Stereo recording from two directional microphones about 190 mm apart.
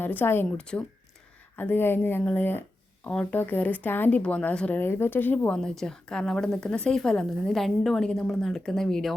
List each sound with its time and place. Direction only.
0.0 s speech: 10° left (ahead or behind)